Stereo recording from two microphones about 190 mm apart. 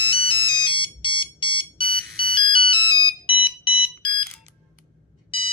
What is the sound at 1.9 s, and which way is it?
Ringtone, 50° right (ahead or behind).